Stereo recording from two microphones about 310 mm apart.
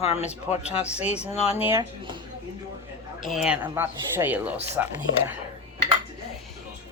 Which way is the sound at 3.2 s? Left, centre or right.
Centre.